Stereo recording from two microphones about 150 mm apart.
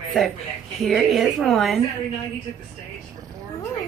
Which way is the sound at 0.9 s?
Centre (ahead or behind).